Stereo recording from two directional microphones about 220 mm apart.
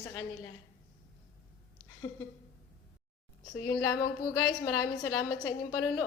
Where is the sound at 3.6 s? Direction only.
15° left (ahead or behind).